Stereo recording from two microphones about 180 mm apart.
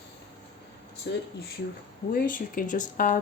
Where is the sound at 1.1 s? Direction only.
70° left (ahead or behind).